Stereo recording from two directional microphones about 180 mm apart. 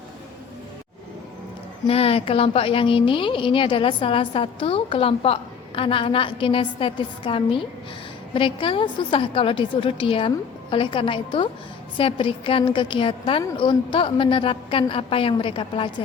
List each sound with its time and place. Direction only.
1.9 s a woman's voice: 35° left (ahead or behind)